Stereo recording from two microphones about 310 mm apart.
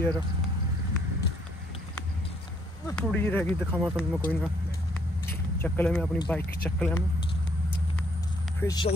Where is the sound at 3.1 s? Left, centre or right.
Centre.